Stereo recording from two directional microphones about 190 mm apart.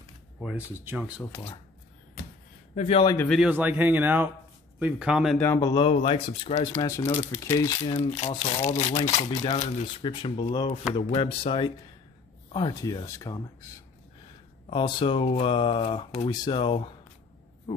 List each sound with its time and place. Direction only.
0.4 s speech: 5° right (ahead or behind)
2.7 s speech: 35° left (ahead or behind)
3.0 s speech: 20° left (ahead or behind)
3.3 s speech: 5° right (ahead or behind)
5.4 s speech: 15° left (ahead or behind)
6.0 s speech: 30° left (ahead or behind)
8.2 s speech: 35° left (ahead or behind)